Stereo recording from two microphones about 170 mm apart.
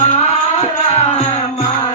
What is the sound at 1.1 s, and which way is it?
Music, 40° left (ahead or behind).